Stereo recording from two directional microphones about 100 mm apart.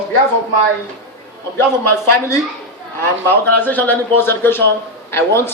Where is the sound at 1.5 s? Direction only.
25° left (ahead or behind).